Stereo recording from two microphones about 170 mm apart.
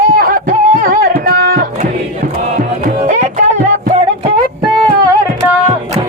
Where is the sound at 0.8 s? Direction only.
55° right (ahead or behind).